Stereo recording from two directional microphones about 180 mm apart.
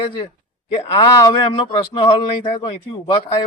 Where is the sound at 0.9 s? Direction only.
20° left (ahead or behind).